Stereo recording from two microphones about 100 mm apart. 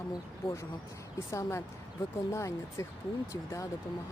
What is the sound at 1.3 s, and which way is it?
Speech, 30° left (ahead or behind).